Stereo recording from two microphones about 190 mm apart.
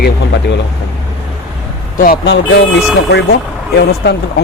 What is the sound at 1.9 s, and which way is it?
Speech, 50° left (ahead or behind).